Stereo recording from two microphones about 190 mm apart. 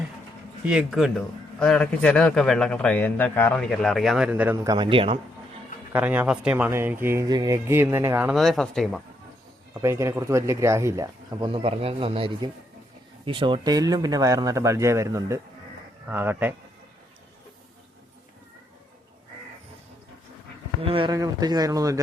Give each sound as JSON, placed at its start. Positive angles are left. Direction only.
{"t": 0.7, "sound": "speech", "side_deg": -5}
{"t": 4.5, "sound": "speech", "side_deg": -20}
{"t": 5.9, "sound": "speech", "side_deg": -10}
{"t": 8.4, "sound": "speech", "side_deg": 0}
{"t": 9.8, "sound": "speech", "side_deg": -15}
{"t": 20.8, "sound": "speech", "side_deg": -25}